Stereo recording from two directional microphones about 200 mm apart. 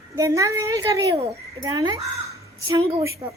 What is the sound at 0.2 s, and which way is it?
Speech, 15° right (ahead or behind).